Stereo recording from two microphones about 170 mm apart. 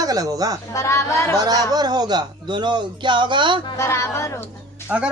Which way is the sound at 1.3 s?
20° right (ahead or behind).